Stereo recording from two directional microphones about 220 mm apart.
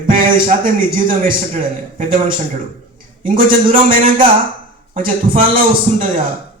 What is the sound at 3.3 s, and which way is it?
A man's voice, 40° right (ahead or behind).